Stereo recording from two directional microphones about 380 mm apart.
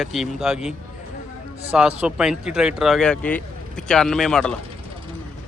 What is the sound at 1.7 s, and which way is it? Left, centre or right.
Speech, centre.